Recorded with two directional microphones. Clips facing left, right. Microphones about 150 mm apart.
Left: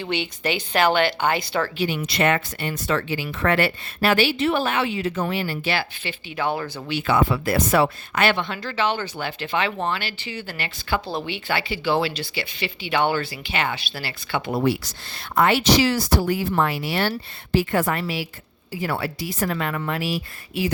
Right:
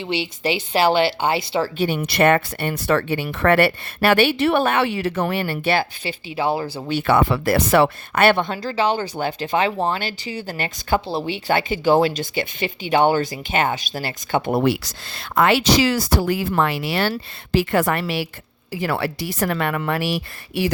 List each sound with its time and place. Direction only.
0.0 s speech: 25° right (ahead or behind)
1.9 s speech: 60° right (ahead or behind)
6.3 s speech: 30° right (ahead or behind)
7.1 s speech: 65° right (ahead or behind)
8.5 s speech: 35° right (ahead or behind)
11.0 s speech: 35° right (ahead or behind)
14.6 s a woman's voice: 80° right
18.7 s a woman's voice: 80° right